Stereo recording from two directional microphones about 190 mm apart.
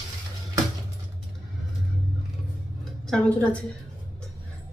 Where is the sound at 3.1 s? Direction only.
5° left (ahead or behind).